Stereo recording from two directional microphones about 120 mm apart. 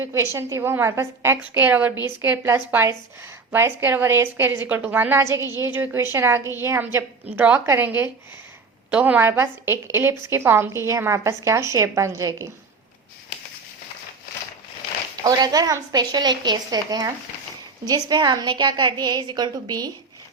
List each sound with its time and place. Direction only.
0.0 s a woman's voice: 25° right (ahead or behind)
15.2 s a woman's voice: 35° right (ahead or behind)